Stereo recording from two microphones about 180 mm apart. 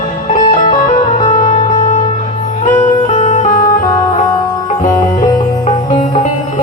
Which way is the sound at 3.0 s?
40° left (ahead or behind).